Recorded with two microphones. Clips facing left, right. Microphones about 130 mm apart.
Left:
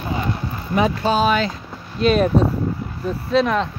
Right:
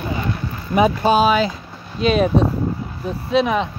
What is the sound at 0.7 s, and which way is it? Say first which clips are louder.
Speech: right 3 dB; 15° right (ahead or behind).